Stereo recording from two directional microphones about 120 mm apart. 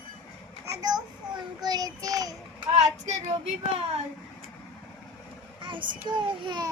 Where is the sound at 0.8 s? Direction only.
35° right (ahead or behind).